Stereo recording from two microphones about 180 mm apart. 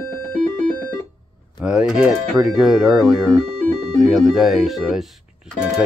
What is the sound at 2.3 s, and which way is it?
Speech, 20° right (ahead or behind).